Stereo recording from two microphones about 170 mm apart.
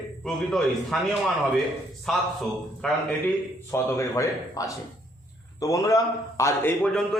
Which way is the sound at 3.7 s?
15° left (ahead or behind).